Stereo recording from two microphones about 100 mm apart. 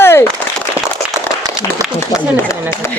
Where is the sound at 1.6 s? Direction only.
40° left (ahead or behind).